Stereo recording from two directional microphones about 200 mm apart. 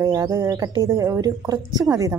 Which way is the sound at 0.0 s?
15° right (ahead or behind).